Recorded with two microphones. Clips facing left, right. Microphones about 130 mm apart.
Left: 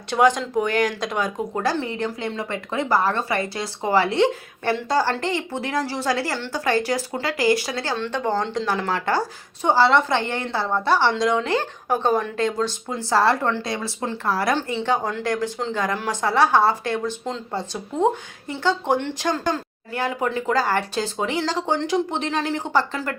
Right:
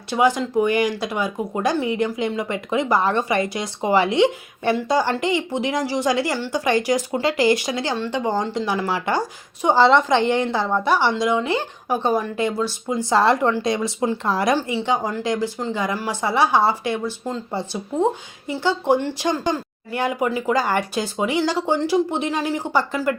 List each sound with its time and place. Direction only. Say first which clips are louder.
0.1 s speech: even; 5° right (ahead or behind)